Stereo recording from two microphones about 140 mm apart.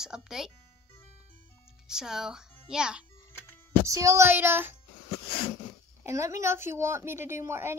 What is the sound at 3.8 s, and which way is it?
Speech, 25° right (ahead or behind).